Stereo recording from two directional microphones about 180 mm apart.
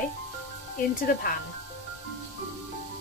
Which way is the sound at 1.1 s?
45° left (ahead or behind).